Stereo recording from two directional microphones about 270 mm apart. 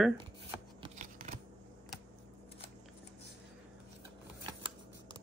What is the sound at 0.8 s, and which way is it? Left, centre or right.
Scissors, right.